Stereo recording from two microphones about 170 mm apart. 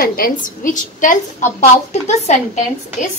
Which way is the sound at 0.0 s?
60° left (ahead or behind).